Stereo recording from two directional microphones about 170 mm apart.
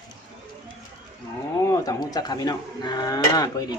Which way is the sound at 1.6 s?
20° left (ahead or behind).